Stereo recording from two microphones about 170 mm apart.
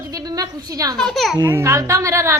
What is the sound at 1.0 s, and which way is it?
Speech, centre (ahead or behind).